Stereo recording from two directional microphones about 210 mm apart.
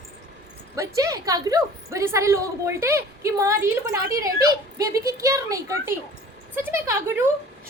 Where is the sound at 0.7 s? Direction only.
15° right (ahead or behind).